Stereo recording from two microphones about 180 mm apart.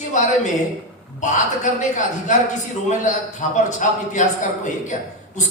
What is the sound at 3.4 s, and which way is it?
A man's voice, 45° left (ahead or behind).